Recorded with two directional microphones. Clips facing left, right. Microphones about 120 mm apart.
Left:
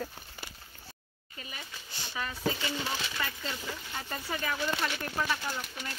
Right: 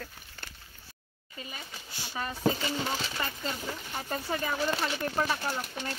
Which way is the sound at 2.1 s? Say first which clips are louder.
Right 4 dB; 35° right (ahead or behind).